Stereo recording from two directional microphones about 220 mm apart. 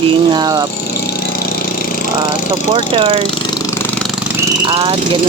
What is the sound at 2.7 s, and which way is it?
Speech, 20° right (ahead or behind).